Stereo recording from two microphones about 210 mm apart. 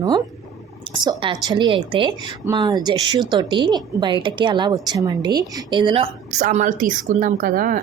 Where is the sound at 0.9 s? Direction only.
20° right (ahead or behind).